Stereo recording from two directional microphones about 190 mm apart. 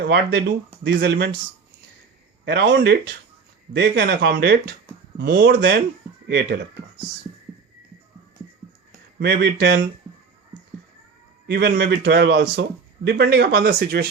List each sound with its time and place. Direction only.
0.0 s speech: 60° right (ahead or behind)
2.4 s speech: 65° right (ahead or behind)
9.1 s speech: 60° right (ahead or behind)
11.4 s a man's voice: 60° right (ahead or behind)